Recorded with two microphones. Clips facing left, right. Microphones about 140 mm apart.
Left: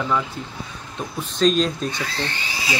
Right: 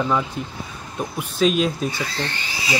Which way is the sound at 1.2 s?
5° right (ahead or behind).